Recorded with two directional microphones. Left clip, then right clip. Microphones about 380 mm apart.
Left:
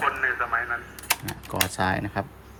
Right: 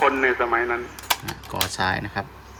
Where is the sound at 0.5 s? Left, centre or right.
Centre.